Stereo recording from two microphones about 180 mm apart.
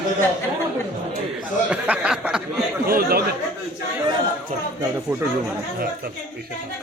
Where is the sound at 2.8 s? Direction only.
55° right (ahead or behind).